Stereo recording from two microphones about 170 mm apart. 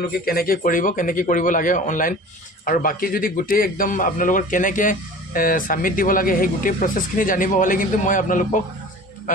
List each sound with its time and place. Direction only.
0.2 s a man's voice: 60° left (ahead or behind)